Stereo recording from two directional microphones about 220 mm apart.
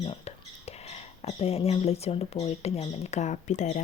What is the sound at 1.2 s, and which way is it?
Speech, 30° left (ahead or behind).